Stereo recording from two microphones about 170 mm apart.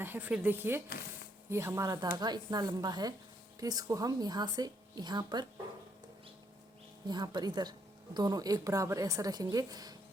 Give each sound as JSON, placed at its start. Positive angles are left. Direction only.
{"t": 0.0, "sound": "a woman's voice", "side_deg": -10}
{"t": 7.1, "sound": "a woman's voice", "side_deg": -25}